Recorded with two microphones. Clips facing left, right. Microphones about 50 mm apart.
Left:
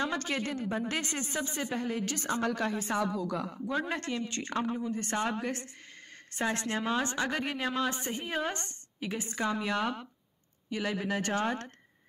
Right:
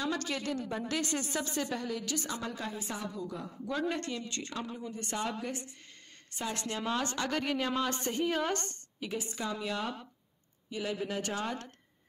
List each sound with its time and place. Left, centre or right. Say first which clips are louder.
0.0 s a woman's voice: left 2 dB; left
2.5 s speech: left 7 dB; left
3.1 s speech: left 6 dB; left
3.5 s a woman's voice: left 1 dB; left
6.8 s a woman's voice: even; centre
8.6 s a woman's voice: left 2 dB; left